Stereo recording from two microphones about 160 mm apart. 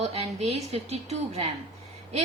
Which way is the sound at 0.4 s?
40° right (ahead or behind).